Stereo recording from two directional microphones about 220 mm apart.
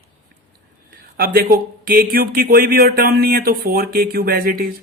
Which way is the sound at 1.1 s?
45° right (ahead or behind).